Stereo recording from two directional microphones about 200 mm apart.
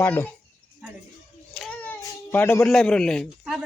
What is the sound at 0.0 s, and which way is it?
Speech, 10° left (ahead or behind).